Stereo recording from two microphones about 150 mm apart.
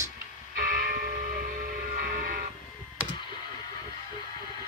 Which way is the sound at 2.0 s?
70° right (ahead or behind).